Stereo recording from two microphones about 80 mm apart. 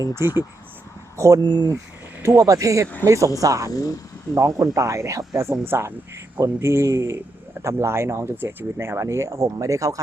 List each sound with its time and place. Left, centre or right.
0.1 s speech: right
1.4 s speech: right
2.4 s speech: right
3.7 s speech: left
4.4 s speech: right